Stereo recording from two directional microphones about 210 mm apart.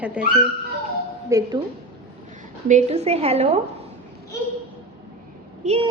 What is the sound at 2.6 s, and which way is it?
Speech, 35° right (ahead or behind).